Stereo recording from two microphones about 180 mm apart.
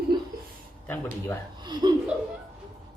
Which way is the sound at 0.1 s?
25° right (ahead or behind).